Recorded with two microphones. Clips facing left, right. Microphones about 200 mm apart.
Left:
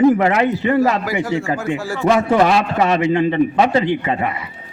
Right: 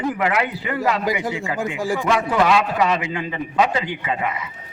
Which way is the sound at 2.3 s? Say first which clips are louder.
Left 3 dB; 40° left (ahead or behind).